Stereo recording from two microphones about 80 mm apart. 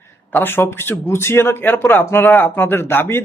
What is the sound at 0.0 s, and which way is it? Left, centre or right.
A man's voice, left.